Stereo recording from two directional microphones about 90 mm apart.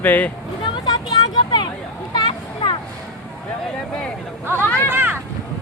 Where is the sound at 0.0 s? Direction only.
20° left (ahead or behind).